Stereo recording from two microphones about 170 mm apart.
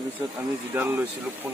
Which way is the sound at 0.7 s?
15° right (ahead or behind).